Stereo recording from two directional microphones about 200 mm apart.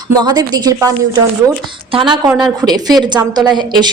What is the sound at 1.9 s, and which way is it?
Speech, 25° right (ahead or behind).